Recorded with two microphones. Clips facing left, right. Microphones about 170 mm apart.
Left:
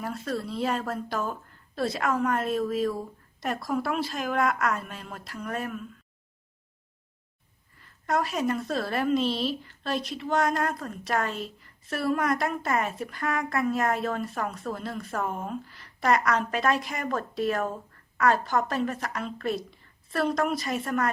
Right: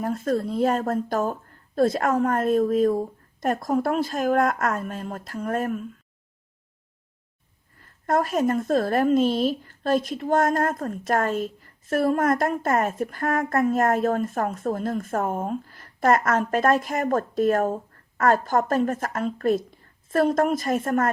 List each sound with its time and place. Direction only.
0.0 s a woman's voice: 45° right (ahead or behind)
7.8 s a woman's voice: 50° right (ahead or behind)